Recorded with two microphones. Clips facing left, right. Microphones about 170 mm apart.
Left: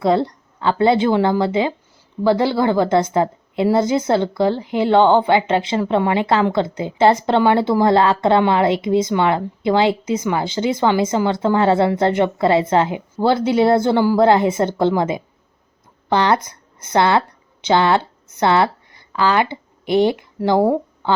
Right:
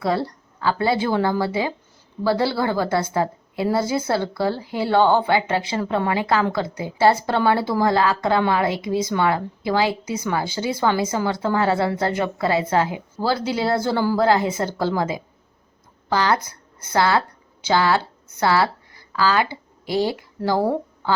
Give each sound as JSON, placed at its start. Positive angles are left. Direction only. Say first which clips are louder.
{"t": 0.0, "sound": "a woman's voice", "louder": "left 6 dB", "side_deg": 25}